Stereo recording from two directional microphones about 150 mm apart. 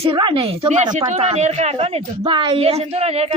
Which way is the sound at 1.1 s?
45° right (ahead or behind).